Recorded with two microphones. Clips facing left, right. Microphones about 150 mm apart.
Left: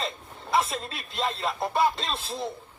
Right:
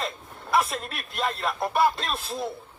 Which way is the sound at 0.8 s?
25° left (ahead or behind).